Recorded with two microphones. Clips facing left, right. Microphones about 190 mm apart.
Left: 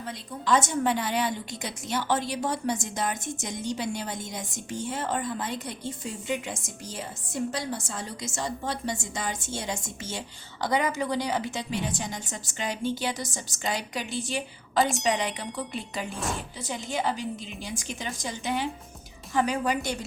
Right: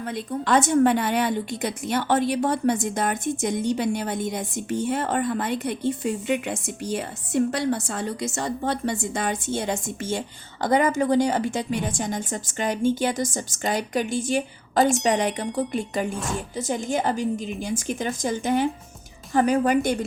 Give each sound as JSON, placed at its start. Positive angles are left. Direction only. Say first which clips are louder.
{"t": 0.0, "sound": "a woman's voice", "louder": "right 6 dB", "side_deg": -55}